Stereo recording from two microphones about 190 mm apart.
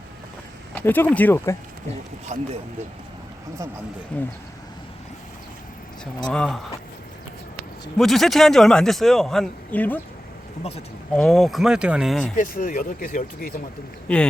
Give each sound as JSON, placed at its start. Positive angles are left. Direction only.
{"t": 0.7, "sound": "a sound", "side_deg": 10}
{"t": 1.1, "sound": "speech", "side_deg": 10}
{"t": 2.2, "sound": "speech", "side_deg": -40}
{"t": 4.1, "sound": "speech", "side_deg": 5}
{"t": 6.2, "sound": "a man's voice", "side_deg": 5}
{"t": 7.9, "sound": "a man's voice", "side_deg": 0}
{"t": 10.6, "sound": "speech", "side_deg": 30}
{"t": 11.1, "sound": "a man's voice", "side_deg": 0}
{"t": 12.4, "sound": "speech", "side_deg": 45}